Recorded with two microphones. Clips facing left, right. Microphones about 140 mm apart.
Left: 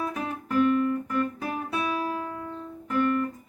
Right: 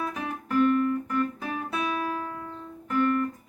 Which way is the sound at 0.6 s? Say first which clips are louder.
Even; 5° left (ahead or behind).